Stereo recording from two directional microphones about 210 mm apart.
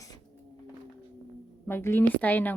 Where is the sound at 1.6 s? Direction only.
10° left (ahead or behind).